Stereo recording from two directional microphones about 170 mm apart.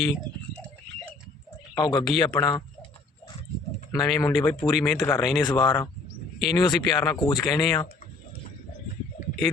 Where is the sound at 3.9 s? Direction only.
25° left (ahead or behind).